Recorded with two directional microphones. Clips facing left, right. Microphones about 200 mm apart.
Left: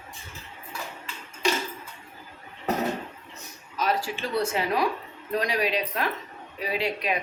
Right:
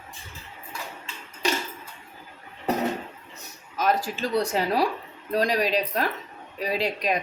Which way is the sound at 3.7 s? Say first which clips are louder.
Right 2 dB; 45° right (ahead or behind).